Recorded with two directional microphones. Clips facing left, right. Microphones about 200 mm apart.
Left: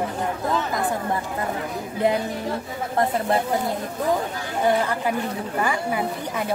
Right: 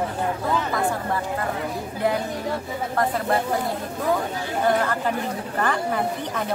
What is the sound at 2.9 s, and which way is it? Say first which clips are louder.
Speech: left 2 dB; 25° left (ahead or behind).